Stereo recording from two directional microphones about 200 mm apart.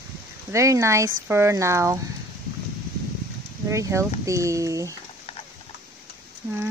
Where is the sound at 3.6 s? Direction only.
15° right (ahead or behind).